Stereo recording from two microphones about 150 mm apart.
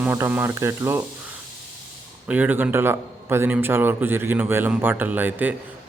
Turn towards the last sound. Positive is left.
turn(degrees=-10)  # may be behind; listen again after turning